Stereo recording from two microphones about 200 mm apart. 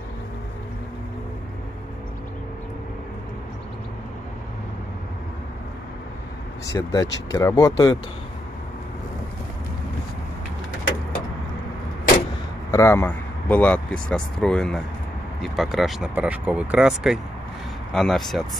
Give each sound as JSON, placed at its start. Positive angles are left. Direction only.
{"t": 6.6, "sound": "speech", "side_deg": 15}
{"t": 12.7, "sound": "speech", "side_deg": 15}